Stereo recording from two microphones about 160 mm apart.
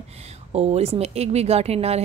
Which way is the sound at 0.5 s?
40° right (ahead or behind).